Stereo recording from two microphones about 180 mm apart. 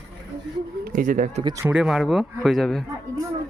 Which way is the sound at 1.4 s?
20° right (ahead or behind).